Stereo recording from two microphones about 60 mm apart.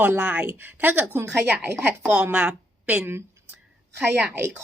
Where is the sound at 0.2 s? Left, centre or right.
Right.